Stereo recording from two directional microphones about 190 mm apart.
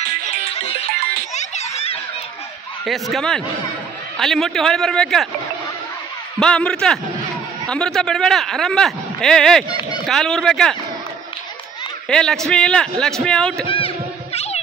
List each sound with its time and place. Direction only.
0.5 s music: 35° left (ahead or behind)
2.8 s speech: centre (ahead or behind)
6.4 s speech: 5° left (ahead or behind)
9.7 s a sound: 20° left (ahead or behind)
10.0 s speech: centre (ahead or behind)
12.1 s speech: 5° left (ahead or behind)
13.7 s a sound: 30° left (ahead or behind)